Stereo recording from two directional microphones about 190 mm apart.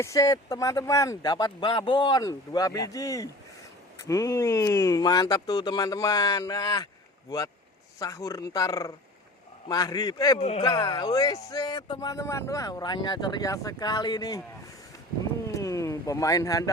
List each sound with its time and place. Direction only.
0.0 s speech: 15° left (ahead or behind)
10.3 s speech: 35° left (ahead or behind)
10.6 s speech: 20° left (ahead or behind)
15.4 s a sound: 15° left (ahead or behind)